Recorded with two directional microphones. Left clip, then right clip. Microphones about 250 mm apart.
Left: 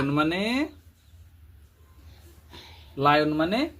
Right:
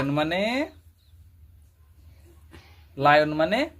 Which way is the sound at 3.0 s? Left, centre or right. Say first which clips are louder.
Right 2 dB; centre.